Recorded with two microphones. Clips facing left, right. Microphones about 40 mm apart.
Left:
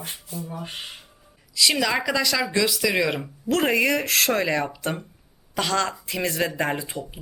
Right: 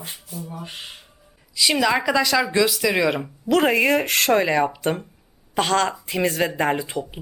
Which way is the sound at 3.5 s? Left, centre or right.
Centre.